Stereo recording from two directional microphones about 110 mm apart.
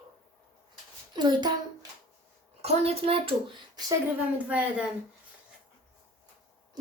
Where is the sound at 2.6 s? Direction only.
60° right (ahead or behind).